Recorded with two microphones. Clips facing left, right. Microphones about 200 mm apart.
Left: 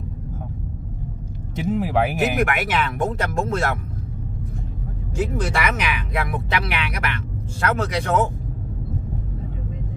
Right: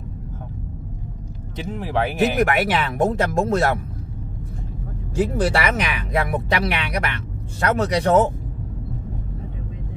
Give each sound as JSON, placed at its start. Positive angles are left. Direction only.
{"t": 1.7, "sound": "speech", "side_deg": 10}
{"t": 2.3, "sound": "speech", "side_deg": -40}
{"t": 5.1, "sound": "speech", "side_deg": -35}